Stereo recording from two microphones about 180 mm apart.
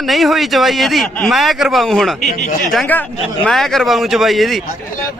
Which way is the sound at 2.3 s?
50° left (ahead or behind).